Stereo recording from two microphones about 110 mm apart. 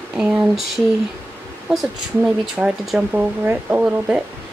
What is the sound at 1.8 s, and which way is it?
Speech, 10° right (ahead or behind).